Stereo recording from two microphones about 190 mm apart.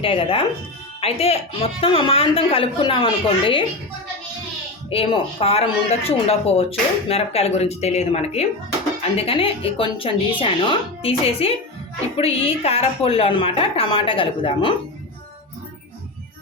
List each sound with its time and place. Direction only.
0.0 s speech: 30° left (ahead or behind)
4.9 s speech: 30° left (ahead or behind)